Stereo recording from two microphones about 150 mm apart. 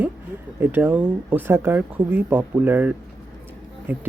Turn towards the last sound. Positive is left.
turn(degrees=-15)  # may be behind; listen again after turning